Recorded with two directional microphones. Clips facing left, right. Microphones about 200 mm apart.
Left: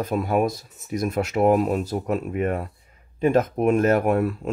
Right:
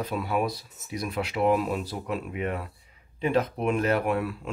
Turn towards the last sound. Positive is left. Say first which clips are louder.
# left 6 dB
turn(degrees=45)  # may be behind; listen again after turning